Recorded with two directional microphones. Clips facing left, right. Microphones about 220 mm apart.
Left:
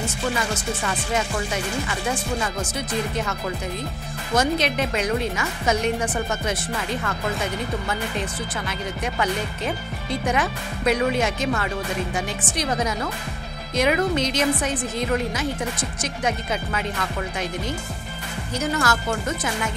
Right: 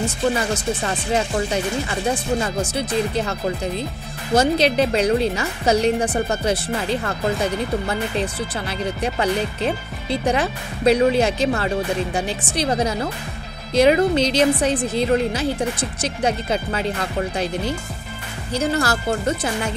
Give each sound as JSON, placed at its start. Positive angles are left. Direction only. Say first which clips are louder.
{"t": 0.8, "sound": "speech", "louder": "right 2 dB", "side_deg": -35}